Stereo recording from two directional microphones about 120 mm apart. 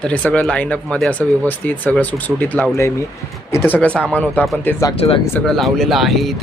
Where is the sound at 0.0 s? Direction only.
10° left (ahead or behind).